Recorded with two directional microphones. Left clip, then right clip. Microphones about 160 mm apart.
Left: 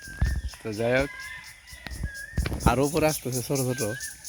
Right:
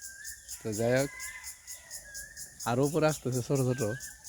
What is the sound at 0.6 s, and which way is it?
Speech, centre (ahead or behind).